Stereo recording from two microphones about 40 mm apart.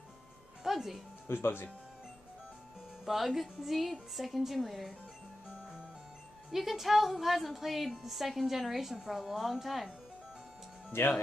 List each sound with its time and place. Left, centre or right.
0.7 s speech: centre
1.2 s speech: left
3.1 s a woman's voice: centre
6.5 s a woman's voice: centre
10.9 s speech: left